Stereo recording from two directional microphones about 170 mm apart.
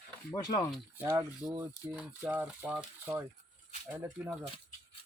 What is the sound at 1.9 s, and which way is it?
Speech, 5° right (ahead or behind).